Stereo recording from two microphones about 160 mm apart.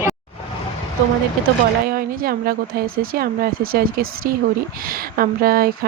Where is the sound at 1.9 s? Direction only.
65° right (ahead or behind).